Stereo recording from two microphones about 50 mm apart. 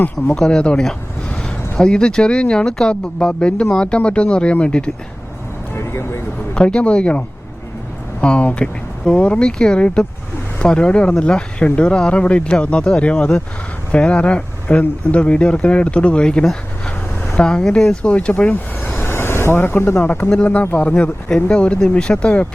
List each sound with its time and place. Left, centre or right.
0.3 s speech: centre
5.8 s speech: left
6.5 s speech: centre; by 20.0 s left
20.3 s speech: left